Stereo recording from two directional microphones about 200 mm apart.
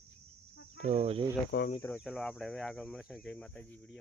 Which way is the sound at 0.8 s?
30° right (ahead or behind).